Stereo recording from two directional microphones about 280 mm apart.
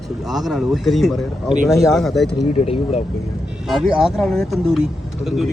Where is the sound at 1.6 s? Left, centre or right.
Centre.